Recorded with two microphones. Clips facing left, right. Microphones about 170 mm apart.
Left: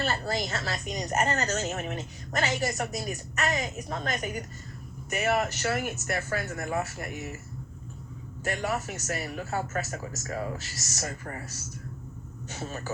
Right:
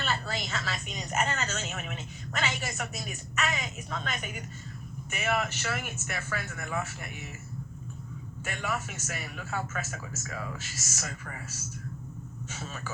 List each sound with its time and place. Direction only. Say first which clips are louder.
0.0 s a woman's voice: left 4 dB; 40° left (ahead or behind)
8.4 s a woman's voice: left 5 dB; 40° left (ahead or behind)